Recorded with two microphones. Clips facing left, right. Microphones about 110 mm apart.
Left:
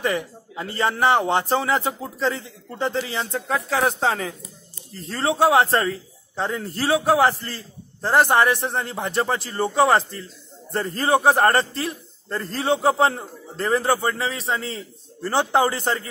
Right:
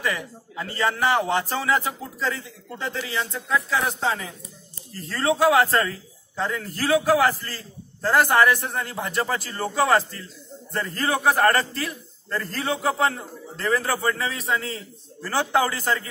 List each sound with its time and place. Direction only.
0.0 s a man's voice: 30° left (ahead or behind)
3.3 s a man's voice: 55° left (ahead or behind); by 4.4 s 70° left (ahead or behind)
4.9 s a man's voice: 25° left (ahead or behind)